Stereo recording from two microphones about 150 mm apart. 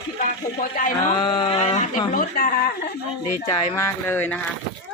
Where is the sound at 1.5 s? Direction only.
50° left (ahead or behind).